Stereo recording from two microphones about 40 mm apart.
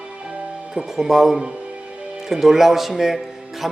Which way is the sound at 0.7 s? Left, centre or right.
Centre.